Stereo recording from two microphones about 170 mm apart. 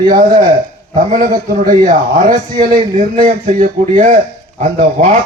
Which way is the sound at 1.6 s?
50° right (ahead or behind).